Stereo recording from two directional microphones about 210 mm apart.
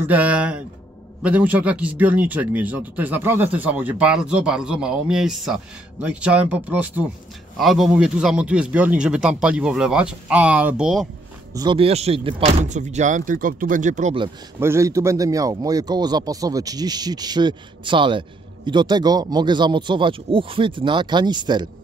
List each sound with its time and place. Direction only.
0.0 s a man's voice: 5° right (ahead or behind)
11.5 s speech: 20° right (ahead or behind)
14.6 s a man's voice: 15° right (ahead or behind)